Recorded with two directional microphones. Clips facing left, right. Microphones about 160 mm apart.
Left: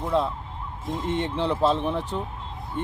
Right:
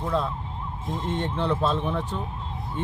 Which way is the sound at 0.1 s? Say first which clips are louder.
Left 3 dB; 20° left (ahead or behind).